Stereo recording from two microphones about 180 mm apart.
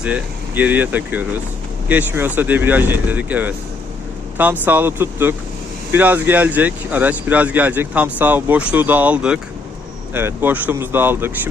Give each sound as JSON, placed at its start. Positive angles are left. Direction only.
{"t": 0.0, "sound": "speech", "side_deg": -10}
{"t": 4.6, "sound": "speech", "side_deg": -10}